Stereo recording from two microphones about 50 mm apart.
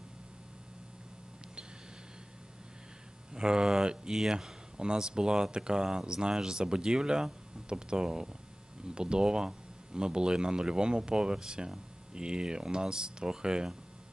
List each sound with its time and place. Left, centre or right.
3.3 s speech: centre